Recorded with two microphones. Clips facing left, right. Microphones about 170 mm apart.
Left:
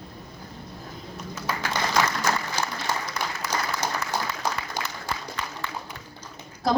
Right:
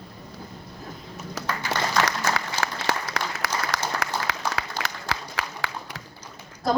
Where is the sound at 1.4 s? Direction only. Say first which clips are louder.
Right 1 dB; 90° right.